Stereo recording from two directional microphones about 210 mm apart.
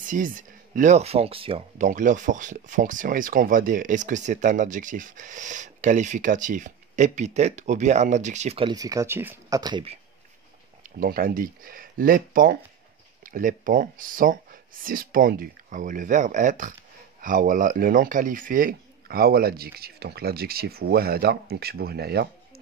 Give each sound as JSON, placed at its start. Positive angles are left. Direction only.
{"t": 0.0, "sound": "speech", "side_deg": -40}
{"t": 1.9, "sound": "speech", "side_deg": -35}
{"t": 11.0, "sound": "speech", "side_deg": -45}